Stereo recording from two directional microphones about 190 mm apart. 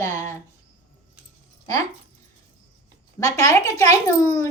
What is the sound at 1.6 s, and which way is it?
Speech, 20° left (ahead or behind).